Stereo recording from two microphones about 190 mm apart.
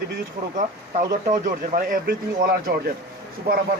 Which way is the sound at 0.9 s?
45° right (ahead or behind).